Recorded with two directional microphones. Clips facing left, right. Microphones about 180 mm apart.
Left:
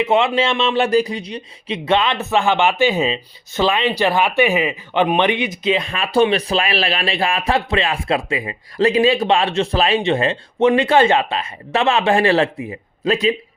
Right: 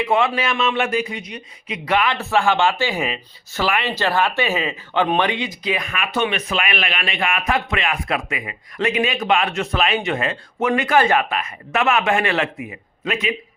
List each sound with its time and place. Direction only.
0.0 s a man's voice: 25° left (ahead or behind)